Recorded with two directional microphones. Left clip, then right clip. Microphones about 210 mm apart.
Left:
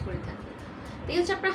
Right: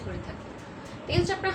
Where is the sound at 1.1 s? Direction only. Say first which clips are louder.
Left 1 dB; 10° left (ahead or behind).